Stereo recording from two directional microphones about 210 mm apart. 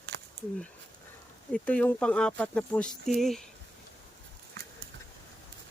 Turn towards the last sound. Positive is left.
turn(degrees=-50)  # may be behind; listen again after turning